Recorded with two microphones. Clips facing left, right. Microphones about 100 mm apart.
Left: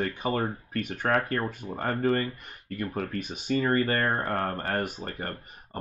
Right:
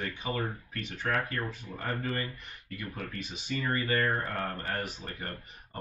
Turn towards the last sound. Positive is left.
turn(degrees=45)  # may be behind; listen again after turning